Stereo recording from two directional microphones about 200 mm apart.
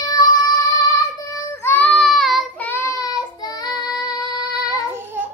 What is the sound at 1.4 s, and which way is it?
Child singing, 15° left (ahead or behind).